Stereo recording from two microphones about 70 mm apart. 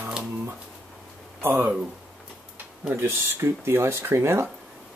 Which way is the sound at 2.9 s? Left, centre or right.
Right.